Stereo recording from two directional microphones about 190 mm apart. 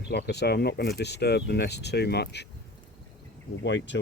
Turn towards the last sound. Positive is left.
turn(degrees=70)  # may be behind; listen again after turning